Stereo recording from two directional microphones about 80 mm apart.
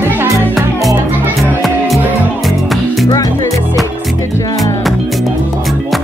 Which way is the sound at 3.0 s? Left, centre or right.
Left.